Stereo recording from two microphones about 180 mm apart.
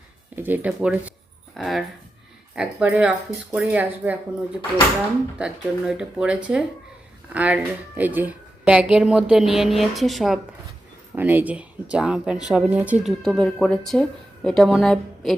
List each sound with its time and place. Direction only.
0.3 s speech: 10° right (ahead or behind)
11.1 s speech: 10° right (ahead or behind)